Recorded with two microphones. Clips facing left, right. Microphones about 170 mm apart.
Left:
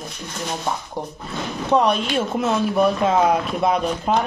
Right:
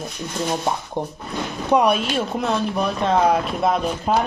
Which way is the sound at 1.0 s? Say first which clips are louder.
Right 3 dB; 20° right (ahead or behind).